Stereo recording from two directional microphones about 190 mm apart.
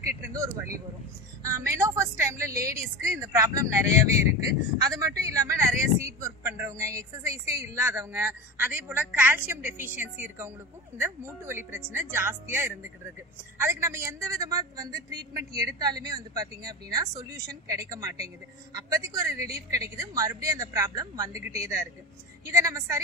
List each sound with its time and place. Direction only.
1.4 s a man's voice: 15° right (ahead or behind)